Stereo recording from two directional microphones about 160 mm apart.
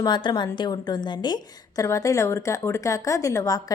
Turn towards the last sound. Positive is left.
turn(degrees=20)  # may be behind; listen again after turning